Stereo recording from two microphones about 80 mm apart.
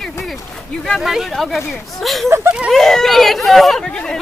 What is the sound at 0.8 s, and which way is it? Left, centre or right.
Speech, centre.